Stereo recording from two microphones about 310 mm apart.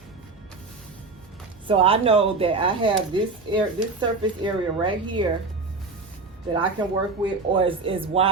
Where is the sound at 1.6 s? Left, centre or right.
Centre.